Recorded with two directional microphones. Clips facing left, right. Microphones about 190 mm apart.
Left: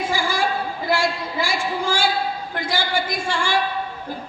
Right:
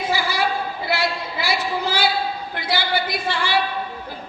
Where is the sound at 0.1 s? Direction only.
45° left (ahead or behind).